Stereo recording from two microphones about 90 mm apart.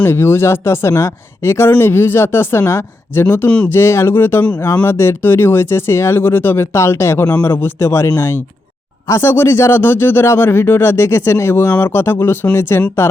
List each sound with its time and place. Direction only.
0.0 s speech: 25° left (ahead or behind)
3.2 s speech: 20° left (ahead or behind)
3.7 s speech: 30° left (ahead or behind)